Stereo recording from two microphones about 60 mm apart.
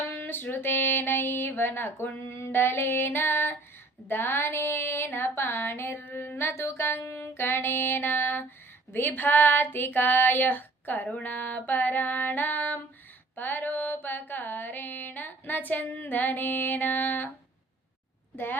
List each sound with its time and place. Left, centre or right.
0.1 s female singing: left
0.5 s music: left
13.3 s mantra: left